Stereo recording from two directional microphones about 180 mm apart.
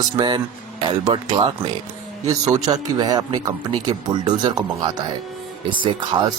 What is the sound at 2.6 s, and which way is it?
Speech, 20° right (ahead or behind).